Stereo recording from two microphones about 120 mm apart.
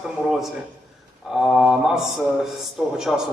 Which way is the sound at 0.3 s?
Centre (ahead or behind).